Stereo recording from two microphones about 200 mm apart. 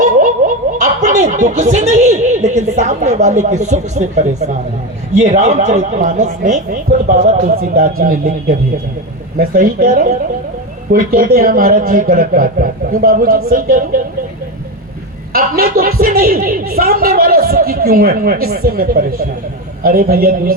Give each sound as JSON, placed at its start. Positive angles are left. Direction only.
{"t": 0.0, "sound": "a man's voice", "side_deg": -40}
{"t": 15.3, "sound": "a woman's voice", "side_deg": -50}